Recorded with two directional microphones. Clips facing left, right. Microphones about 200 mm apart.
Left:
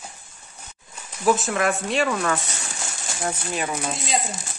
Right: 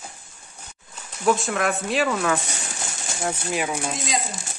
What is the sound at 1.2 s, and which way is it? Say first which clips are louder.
Speech: left 1 dB; centre (ahead or behind).